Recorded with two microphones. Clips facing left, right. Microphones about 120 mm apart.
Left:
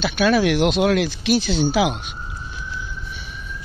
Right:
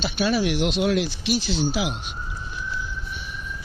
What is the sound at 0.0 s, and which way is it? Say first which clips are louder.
Speech: left 5 dB; 70° left (ahead or behind).